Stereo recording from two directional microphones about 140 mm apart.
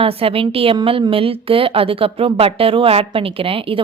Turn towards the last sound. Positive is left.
turn(degrees=-40)  # may be behind; listen again after turning